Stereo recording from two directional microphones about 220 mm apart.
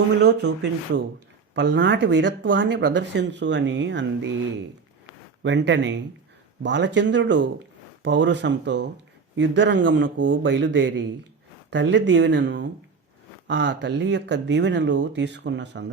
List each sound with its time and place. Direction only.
0.2 s speech: 50° right (ahead or behind)
5.4 s a man's voice: 55° right (ahead or behind)